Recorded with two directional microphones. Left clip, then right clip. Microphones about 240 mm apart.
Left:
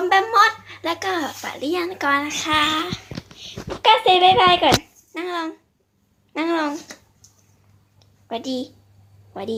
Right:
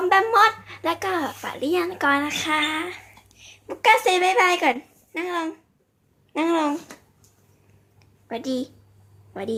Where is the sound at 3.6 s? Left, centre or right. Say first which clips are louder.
Left 2 dB; right.